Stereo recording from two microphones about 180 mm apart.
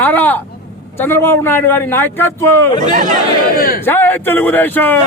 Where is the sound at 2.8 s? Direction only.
45° right (ahead or behind).